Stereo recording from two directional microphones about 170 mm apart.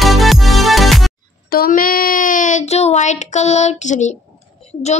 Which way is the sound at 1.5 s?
55° left (ahead or behind).